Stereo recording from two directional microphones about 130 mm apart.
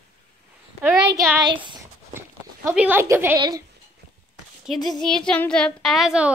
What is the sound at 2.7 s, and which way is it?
Speech, 15° right (ahead or behind).